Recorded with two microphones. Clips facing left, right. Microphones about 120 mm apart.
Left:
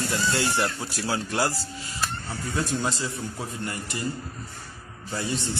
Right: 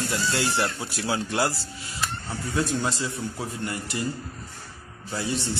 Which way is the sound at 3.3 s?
15° right (ahead or behind).